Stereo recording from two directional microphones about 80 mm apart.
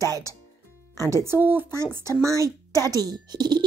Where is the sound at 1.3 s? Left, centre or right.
Right.